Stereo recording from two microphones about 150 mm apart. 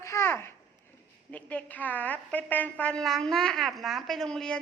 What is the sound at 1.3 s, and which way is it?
A woman's voice, 10° left (ahead or behind).